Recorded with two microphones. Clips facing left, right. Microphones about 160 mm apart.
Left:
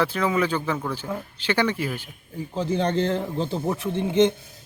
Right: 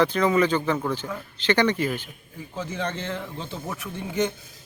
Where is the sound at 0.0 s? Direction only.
5° left (ahead or behind).